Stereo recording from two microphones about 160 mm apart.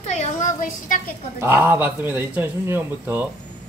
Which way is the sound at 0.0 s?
45° left (ahead or behind).